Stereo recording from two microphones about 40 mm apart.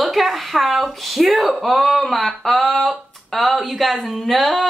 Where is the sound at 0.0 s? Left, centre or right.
Centre.